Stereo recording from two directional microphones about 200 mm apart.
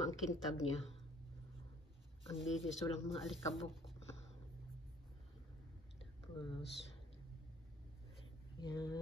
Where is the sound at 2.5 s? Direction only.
Centre (ahead or behind).